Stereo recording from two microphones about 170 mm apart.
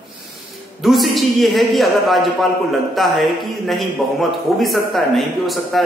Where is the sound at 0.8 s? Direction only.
Centre (ahead or behind).